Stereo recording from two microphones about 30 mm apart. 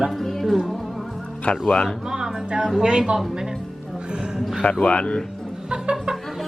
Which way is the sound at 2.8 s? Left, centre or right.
Right.